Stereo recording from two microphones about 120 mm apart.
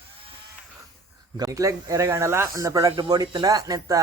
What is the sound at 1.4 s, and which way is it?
Speech, 30° right (ahead or behind).